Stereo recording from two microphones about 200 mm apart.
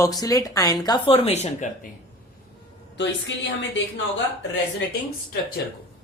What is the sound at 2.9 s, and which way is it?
Speech, 65° left (ahead or behind).